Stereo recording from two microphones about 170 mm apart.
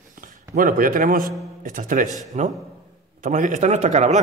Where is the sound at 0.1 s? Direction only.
50° right (ahead or behind).